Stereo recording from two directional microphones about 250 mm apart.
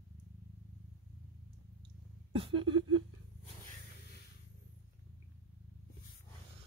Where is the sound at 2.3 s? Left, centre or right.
Right.